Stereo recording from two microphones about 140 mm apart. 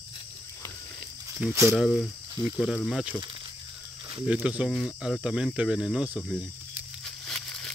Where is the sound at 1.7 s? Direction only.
Centre (ahead or behind).